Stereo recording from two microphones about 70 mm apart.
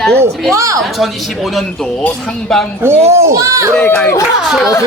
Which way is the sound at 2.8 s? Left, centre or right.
Right.